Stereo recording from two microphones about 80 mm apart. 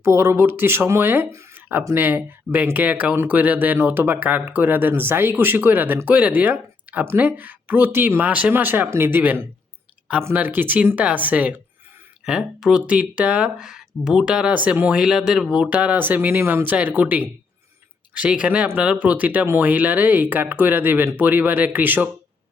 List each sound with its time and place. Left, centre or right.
0.0 s speech: right; by 11.5 s centre
12.2 s speech: centre; by 16.4 s right
16.4 s speech: right
16.6 s speech: right